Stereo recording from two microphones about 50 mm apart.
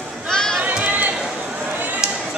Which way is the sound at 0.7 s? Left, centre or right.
Right.